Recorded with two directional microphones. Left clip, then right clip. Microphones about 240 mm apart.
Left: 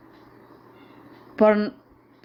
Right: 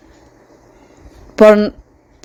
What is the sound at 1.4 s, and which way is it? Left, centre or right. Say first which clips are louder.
Speech: right 11 dB; right.